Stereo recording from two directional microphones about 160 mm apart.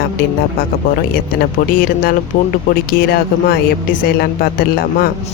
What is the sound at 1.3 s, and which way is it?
Speech, 70° left (ahead or behind).